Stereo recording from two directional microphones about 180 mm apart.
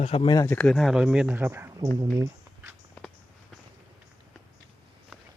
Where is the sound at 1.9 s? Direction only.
20° right (ahead or behind).